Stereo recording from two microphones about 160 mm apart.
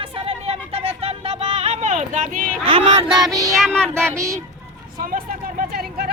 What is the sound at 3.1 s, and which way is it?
Music, 20° right (ahead or behind).